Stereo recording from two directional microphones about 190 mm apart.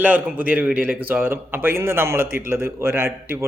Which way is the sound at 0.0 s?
10° right (ahead or behind).